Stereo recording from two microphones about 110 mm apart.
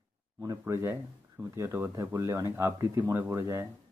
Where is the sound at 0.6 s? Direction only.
25° right (ahead or behind).